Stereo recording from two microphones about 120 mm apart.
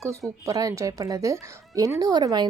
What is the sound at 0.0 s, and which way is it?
Speech, 25° right (ahead or behind).